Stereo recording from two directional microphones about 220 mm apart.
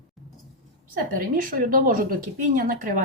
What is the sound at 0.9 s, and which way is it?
A woman's voice, 40° right (ahead or behind).